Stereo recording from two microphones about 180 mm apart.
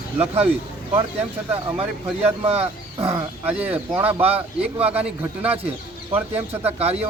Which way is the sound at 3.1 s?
10° right (ahead or behind).